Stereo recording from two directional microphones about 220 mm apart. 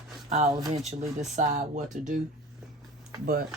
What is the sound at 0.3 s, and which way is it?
Speech, 30° right (ahead or behind).